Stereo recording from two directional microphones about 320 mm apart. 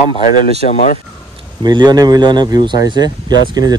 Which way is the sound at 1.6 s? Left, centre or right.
Centre.